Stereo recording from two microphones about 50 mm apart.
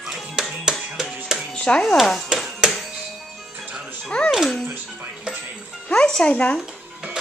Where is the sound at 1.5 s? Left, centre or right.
Centre.